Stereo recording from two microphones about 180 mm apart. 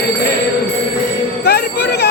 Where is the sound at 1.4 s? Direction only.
65° left (ahead or behind).